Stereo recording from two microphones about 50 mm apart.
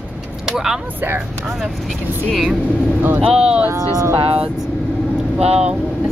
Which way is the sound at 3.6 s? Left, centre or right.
Right.